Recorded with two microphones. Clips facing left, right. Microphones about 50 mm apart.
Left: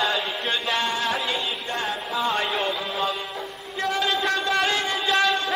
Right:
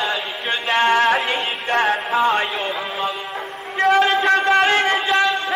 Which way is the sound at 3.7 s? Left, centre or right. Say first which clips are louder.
Right 10 dB; right.